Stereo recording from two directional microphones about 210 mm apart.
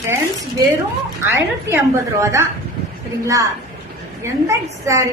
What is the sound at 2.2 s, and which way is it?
Speech, 15° right (ahead or behind).